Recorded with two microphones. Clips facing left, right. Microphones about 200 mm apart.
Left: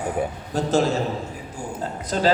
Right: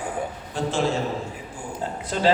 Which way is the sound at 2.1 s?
40° left (ahead or behind).